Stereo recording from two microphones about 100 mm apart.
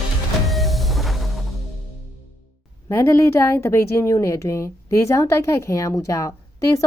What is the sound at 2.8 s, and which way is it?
A woman's voice, 25° left (ahead or behind).